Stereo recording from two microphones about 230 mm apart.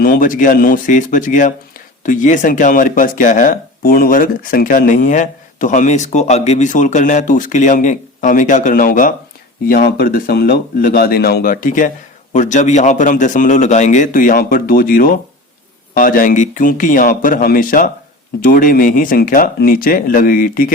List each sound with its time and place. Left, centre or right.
0.0 s speech: left